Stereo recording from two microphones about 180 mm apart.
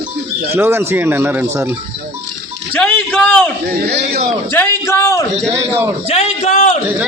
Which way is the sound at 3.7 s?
60° right (ahead or behind).